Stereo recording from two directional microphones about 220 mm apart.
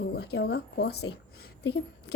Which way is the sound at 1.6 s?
50° left (ahead or behind).